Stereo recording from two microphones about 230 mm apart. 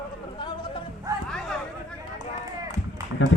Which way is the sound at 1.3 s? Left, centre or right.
Centre.